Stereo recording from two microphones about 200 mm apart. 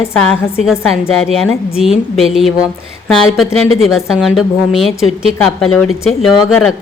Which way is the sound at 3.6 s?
90° left.